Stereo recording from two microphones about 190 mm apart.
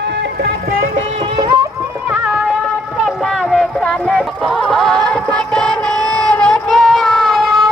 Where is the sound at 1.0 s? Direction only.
25° right (ahead or behind).